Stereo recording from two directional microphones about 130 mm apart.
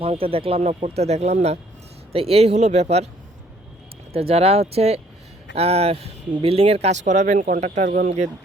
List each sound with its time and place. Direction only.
0.0 s speech: 45° right (ahead or behind)
4.1 s speech: 50° right (ahead or behind); by 8.1 s 80° right